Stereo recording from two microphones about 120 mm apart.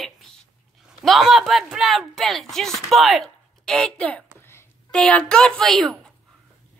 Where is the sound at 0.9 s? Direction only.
Centre (ahead or behind).